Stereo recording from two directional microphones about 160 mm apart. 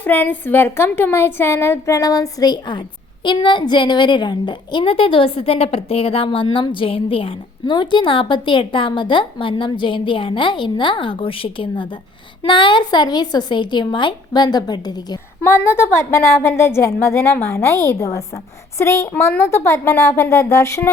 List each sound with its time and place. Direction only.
0.0 s a woman's voice: 10° left (ahead or behind)
15.4 s a woman's voice: 15° left (ahead or behind)